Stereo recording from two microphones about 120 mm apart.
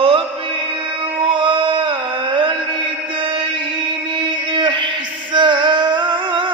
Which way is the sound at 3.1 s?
45° right (ahead or behind).